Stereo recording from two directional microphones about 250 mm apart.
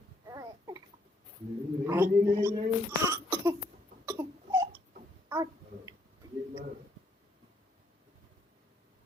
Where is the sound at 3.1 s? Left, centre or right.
Centre.